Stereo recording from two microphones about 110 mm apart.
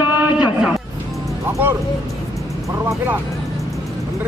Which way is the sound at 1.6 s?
15° right (ahead or behind).